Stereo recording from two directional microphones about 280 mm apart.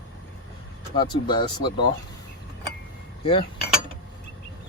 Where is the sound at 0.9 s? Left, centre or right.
Centre.